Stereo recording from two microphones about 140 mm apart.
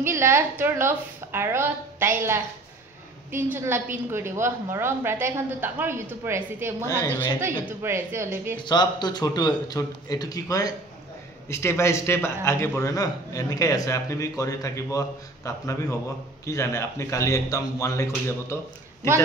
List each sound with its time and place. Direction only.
0.0 s a woman's voice: 20° right (ahead or behind)
3.3 s a woman's voice: 15° right (ahead or behind)
7.0 s speech: 15° left (ahead or behind)
7.6 s a woman's voice: 15° right (ahead or behind)
8.5 s a man's voice: 30° left (ahead or behind)